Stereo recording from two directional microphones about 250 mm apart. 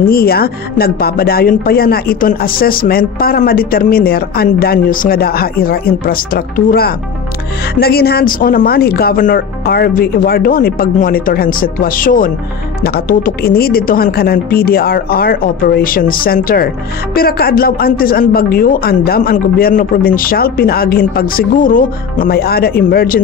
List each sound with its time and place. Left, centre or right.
0.0 s a woman's voice: left